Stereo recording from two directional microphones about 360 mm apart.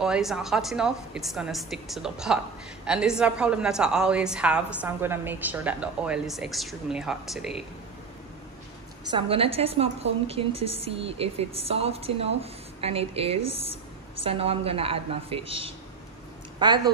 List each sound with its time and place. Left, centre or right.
0.0 s a woman's voice: centre
9.1 s a woman's voice: centre